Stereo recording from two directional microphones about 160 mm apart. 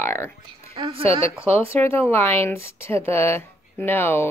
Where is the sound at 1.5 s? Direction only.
15° left (ahead or behind).